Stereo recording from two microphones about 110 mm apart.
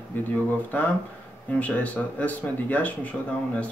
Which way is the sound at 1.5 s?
15° left (ahead or behind).